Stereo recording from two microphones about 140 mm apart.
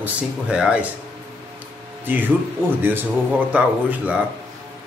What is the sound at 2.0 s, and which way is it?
Speech, 15° right (ahead or behind).